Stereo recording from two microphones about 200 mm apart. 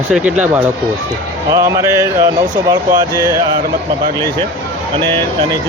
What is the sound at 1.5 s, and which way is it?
Speech, 15° right (ahead or behind).